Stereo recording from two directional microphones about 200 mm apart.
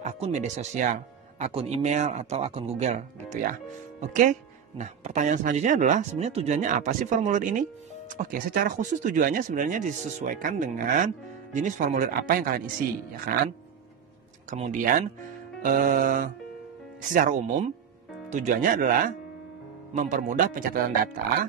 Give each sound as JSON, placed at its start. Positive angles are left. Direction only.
{"t": 0.0, "sound": "speech", "side_deg": -35}
{"t": 14.5, "sound": "speech", "side_deg": -40}